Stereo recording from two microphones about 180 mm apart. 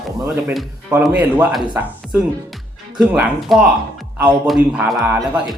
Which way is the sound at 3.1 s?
5° right (ahead or behind).